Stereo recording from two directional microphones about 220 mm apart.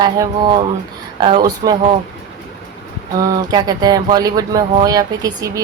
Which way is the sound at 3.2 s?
15° right (ahead or behind).